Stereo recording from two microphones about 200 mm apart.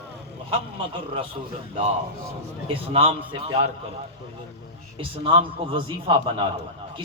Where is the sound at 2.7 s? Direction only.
25° right (ahead or behind).